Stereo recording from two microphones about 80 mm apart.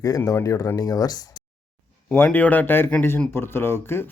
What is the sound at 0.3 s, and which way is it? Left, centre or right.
Speech, left.